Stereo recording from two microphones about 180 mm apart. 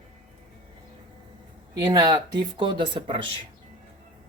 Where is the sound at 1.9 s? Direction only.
20° right (ahead or behind).